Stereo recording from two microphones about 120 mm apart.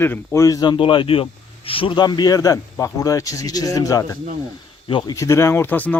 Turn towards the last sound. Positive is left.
turn(degrees=15)  # may be behind; listen again after turning